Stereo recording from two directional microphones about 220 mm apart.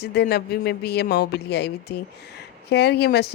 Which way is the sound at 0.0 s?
45° left (ahead or behind).